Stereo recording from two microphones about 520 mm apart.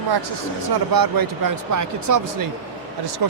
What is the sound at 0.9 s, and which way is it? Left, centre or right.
Speech, right.